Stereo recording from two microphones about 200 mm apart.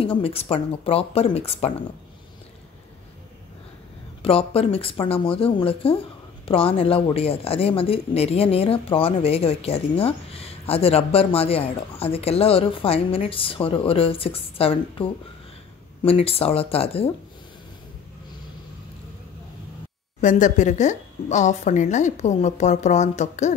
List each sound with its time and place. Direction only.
0.0 s speech: 30° left (ahead or behind)
4.2 s speech: 30° left (ahead or behind)
20.2 s a woman's voice: 40° left (ahead or behind)